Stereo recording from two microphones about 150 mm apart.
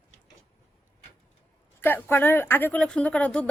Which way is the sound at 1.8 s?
15° left (ahead or behind).